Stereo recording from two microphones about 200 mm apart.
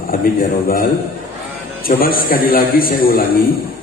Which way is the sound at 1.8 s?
45° left (ahead or behind).